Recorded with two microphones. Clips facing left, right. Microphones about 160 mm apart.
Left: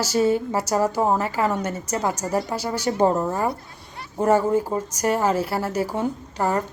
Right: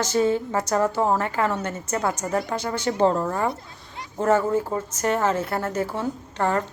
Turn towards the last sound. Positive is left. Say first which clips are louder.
# even
turn(degrees=10)  # may be behind; listen again after turning